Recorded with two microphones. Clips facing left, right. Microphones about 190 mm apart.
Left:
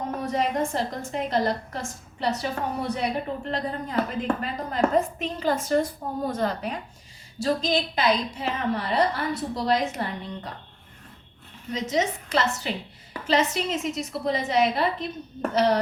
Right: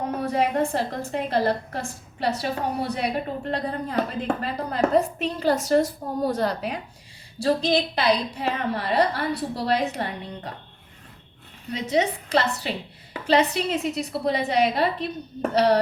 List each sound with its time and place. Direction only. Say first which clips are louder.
0.1 s a woman's voice: right 2 dB; 35° right (ahead or behind)
4.9 s a woman's voice: right 4 dB; 75° right (ahead or behind)
5.2 s a woman's voice: right 3 dB; 40° right (ahead or behind)
11.9 s a woman's voice: right 4 dB; 35° right (ahead or behind)